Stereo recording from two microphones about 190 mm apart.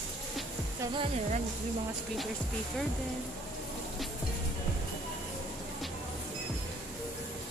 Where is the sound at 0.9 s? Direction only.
30° right (ahead or behind).